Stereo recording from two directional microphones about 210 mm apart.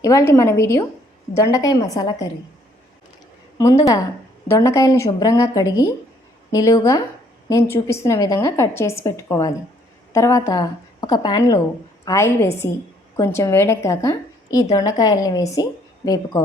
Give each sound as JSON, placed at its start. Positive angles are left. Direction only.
{"t": 0.0, "sound": "a woman's voice", "side_deg": 15}
{"t": 3.6, "sound": "a woman's voice", "side_deg": 15}